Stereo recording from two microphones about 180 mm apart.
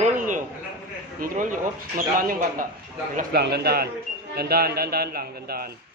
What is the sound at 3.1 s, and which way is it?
A man's voice, 60° right (ahead or behind).